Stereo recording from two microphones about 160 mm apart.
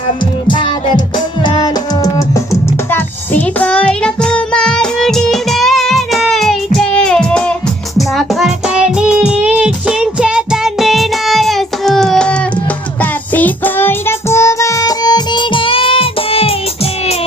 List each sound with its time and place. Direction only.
0.4 s music: 30° left (ahead or behind)